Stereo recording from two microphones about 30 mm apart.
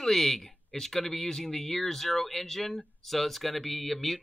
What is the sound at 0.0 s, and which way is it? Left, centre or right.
Speech, centre.